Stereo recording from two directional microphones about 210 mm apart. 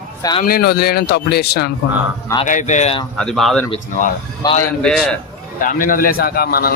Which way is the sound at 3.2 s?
Centre (ahead or behind).